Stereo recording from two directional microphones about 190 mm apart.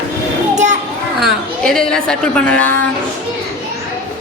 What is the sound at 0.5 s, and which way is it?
Children playing, 40° right (ahead or behind).